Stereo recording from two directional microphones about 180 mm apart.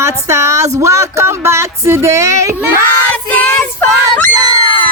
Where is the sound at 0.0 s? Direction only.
15° right (ahead or behind).